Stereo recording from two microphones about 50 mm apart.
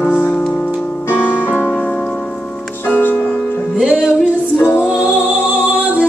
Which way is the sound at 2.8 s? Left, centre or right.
Left.